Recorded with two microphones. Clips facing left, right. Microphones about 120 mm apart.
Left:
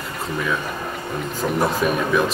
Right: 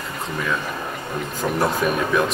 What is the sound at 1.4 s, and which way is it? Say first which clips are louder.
Speech: left 1 dB; centre (ahead or behind).